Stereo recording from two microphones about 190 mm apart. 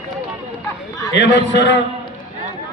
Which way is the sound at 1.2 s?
65° left (ahead or behind).